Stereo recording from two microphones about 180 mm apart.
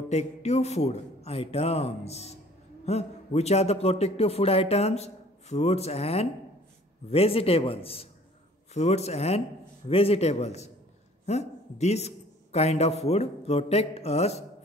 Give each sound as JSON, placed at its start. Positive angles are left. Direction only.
{"t": 0.1, "sound": "a man's voice", "side_deg": 40}